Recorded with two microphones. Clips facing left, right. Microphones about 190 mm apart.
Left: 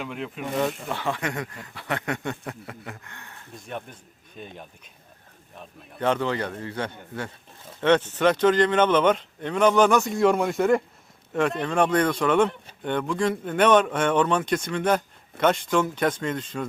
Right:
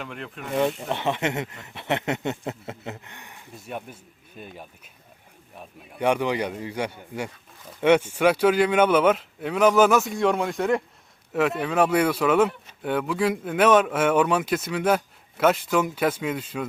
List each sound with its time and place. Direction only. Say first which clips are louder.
0.0 s a man's voice: left 3 dB; centre (ahead or behind)
0.9 s a man's voice: right 3 dB; 20° right (ahead or behind)